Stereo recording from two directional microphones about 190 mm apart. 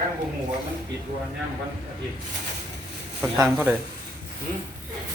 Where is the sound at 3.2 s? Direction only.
5° right (ahead or behind).